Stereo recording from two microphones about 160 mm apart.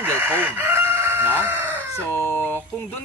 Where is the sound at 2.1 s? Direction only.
15° left (ahead or behind).